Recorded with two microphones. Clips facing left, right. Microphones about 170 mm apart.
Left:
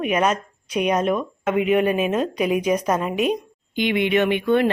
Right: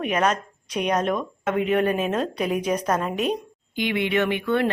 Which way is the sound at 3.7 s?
20° left (ahead or behind).